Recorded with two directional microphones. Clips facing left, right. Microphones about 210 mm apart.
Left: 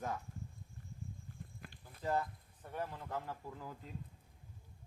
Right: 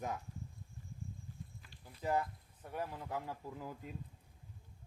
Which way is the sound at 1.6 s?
55° left (ahead or behind).